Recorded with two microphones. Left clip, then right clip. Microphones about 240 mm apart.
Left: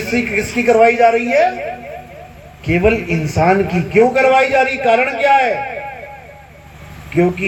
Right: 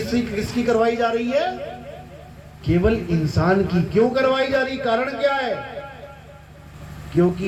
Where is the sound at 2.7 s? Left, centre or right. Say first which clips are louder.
Left 6 dB; left.